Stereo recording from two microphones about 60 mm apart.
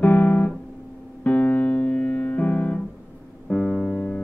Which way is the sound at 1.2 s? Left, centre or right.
Left.